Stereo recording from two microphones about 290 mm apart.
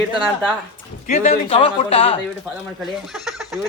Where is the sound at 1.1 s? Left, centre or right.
Left.